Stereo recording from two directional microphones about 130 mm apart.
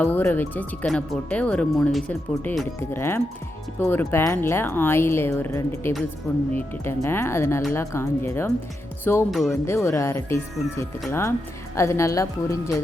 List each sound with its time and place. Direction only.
0.0 s speech: 15° left (ahead or behind)
2.9 s speech: 20° left (ahead or behind)